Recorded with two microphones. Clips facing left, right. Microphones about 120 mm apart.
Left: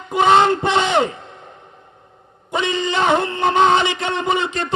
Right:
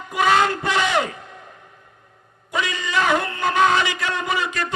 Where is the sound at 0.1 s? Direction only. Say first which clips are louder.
Left 5 dB; 25° left (ahead or behind).